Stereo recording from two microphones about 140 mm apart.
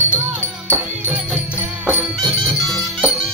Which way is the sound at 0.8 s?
10° right (ahead or behind).